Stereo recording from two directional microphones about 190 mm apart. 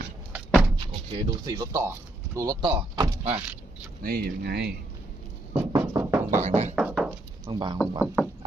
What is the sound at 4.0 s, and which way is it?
Speech, 55° right (ahead or behind).